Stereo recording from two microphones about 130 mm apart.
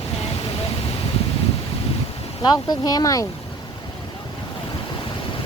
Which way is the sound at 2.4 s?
30° left (ahead or behind).